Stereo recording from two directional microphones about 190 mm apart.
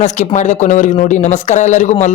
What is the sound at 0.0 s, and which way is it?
Speech, 40° left (ahead or behind).